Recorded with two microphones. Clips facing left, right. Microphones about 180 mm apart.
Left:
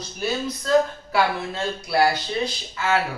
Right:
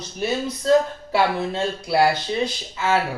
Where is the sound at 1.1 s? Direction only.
25° right (ahead or behind).